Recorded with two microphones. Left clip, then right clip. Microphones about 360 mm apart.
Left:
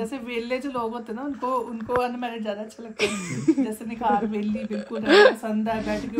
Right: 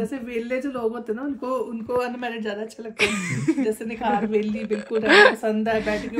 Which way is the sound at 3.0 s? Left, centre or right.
Right.